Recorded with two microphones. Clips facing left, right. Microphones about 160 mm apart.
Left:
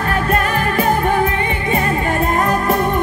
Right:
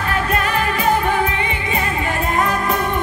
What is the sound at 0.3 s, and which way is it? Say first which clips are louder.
Music: left 2 dB; 45° left (ahead or behind).